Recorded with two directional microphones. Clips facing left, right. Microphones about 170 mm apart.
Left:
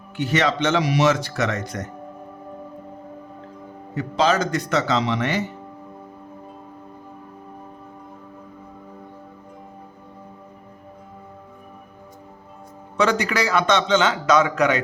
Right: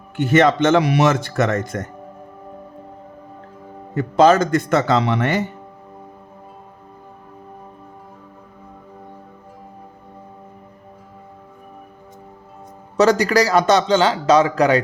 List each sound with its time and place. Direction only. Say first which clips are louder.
0.2 s speech: right 6 dB; 50° right (ahead or behind)
3.9 s speech: right 7 dB; 50° right (ahead or behind)
13.0 s a man's voice: right 6 dB; 40° right (ahead or behind)